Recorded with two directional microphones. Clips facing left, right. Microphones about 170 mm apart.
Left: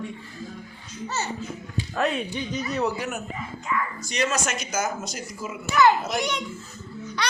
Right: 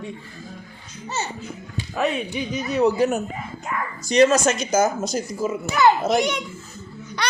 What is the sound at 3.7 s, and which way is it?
Speech, 45° right (ahead or behind).